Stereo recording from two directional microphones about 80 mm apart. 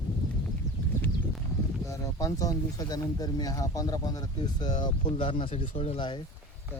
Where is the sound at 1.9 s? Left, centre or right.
Left.